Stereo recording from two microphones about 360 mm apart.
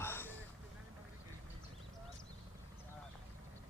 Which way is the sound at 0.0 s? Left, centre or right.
Centre.